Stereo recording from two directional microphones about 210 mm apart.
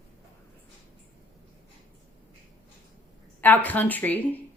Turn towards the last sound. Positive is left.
turn(degrees=10)  # may be behind; listen again after turning